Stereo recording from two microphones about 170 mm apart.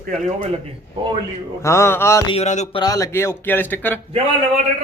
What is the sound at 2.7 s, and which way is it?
A man's voice, 20° left (ahead or behind).